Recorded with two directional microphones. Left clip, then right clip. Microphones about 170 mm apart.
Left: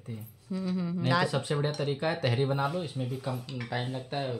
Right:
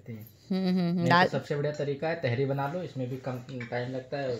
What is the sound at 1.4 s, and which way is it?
Speech, 20° left (ahead or behind).